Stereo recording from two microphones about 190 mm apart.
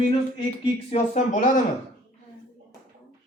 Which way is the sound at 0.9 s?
40° left (ahead or behind).